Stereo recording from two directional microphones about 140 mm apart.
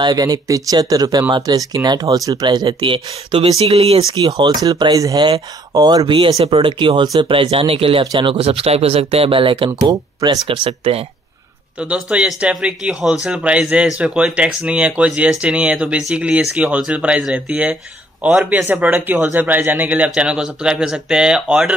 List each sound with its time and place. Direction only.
0.0 s speech: 30° right (ahead or behind); by 4.0 s 45° right (ahead or behind)
4.1 s speech: 35° right (ahead or behind)
10.4 s speech: 40° right (ahead or behind)
11.8 s speech: 10° right (ahead or behind)